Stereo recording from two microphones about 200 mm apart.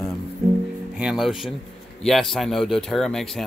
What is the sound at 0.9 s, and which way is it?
Speech, 5° right (ahead or behind).